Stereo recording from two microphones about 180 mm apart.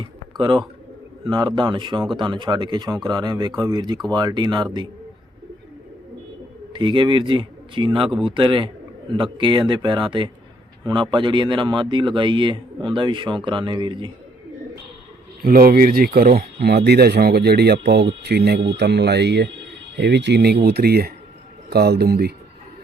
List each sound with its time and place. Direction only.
0.3 s a man's voice: 25° right (ahead or behind)
6.7 s speech: 25° right (ahead or behind)
15.4 s speech: 55° right (ahead or behind)